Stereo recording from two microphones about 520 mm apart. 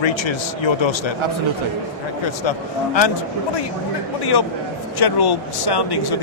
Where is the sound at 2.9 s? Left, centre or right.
Left.